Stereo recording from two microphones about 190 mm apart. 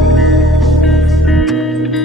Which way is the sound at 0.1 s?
Centre (ahead or behind).